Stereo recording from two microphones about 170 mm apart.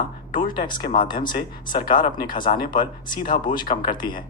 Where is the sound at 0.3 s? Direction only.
55° left (ahead or behind).